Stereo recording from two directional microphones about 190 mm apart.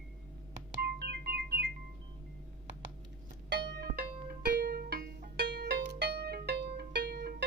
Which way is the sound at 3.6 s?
60° right (ahead or behind).